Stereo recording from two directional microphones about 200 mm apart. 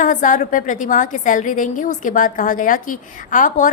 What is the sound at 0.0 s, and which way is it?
A woman's voice, 40° left (ahead or behind).